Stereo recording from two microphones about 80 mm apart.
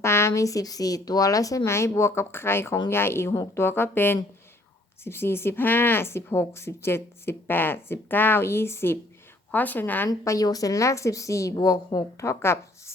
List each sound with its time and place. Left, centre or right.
0.0 s speech: left
9.5 s speech: left
10.2 s a woman's voice: left